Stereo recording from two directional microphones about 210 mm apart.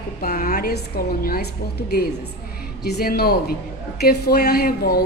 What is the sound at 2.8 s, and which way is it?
A woman's voice, 45° left (ahead or behind).